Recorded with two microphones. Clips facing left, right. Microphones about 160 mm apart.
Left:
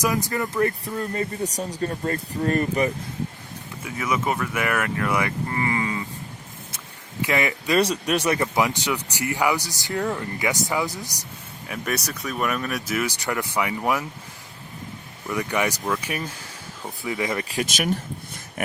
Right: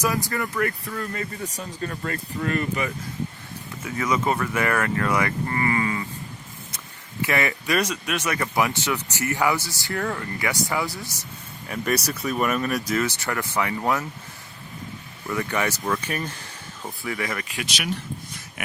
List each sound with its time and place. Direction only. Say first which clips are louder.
0.0 s speech: left 1 dB; 20° left (ahead or behind); by 2.9 s 40° left (ahead or behind)
3.8 s speech: right 1 dB; 10° left (ahead or behind)
7.2 s speech: left 1 dB; 15° left (ahead or behind)
7.8 s speech: left 4 dB; 35° left (ahead or behind)
8.4 s speech: left 1 dB; 20° left (ahead or behind)
11.7 s speech: right 3 dB; centre (ahead or behind)
15.3 s speech: left 1 dB; 15° left (ahead or behind)
17.5 s speech: left 5 dB; 45° left (ahead or behind)